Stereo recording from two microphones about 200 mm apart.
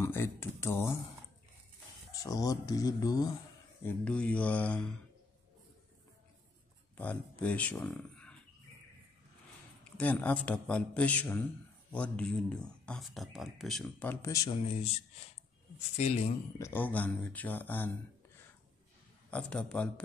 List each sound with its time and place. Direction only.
0.0 s speech: 10° left (ahead or behind)
2.2 s a man's voice: 20° left (ahead or behind)
3.8 s a man's voice: 5° left (ahead or behind)
7.0 s speech: 5° left (ahead or behind)
9.9 s a man's voice: 5° left (ahead or behind)
13.8 s a man's voice: 10° left (ahead or behind)
14.6 s speech: 30° left (ahead or behind)
16.0 s speech: 30° left (ahead or behind)
16.5 s a man's voice: 10° left (ahead or behind)
19.3 s speech: 5° left (ahead or behind)